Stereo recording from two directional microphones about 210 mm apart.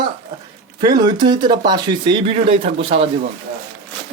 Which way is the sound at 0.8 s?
20° right (ahead or behind).